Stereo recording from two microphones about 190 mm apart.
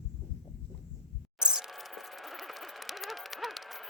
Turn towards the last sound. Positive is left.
turn(degrees=0)  # may be behind; listen again after turning